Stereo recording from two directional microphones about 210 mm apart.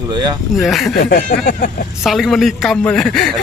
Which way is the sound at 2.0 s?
Centre (ahead or behind).